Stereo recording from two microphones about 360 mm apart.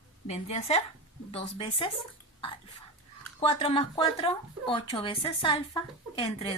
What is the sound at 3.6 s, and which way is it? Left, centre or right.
Speech, centre.